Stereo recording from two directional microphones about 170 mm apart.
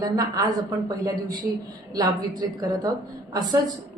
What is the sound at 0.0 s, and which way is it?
A woman's voice, 20° right (ahead or behind).